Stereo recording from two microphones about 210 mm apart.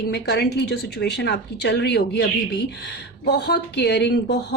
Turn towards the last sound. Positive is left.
turn(degrees=55)  # may be behind; listen again after turning